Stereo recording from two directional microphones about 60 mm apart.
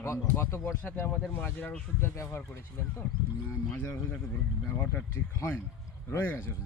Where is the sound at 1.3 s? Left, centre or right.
Left.